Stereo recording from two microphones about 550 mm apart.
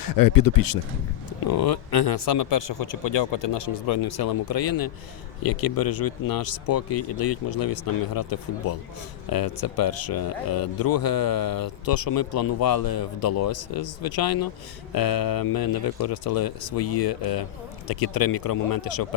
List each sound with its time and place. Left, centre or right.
0.0 s speech: left